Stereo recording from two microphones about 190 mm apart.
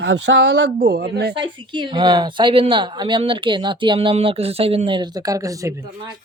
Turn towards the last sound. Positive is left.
turn(degrees=-15)  # may be behind; listen again after turning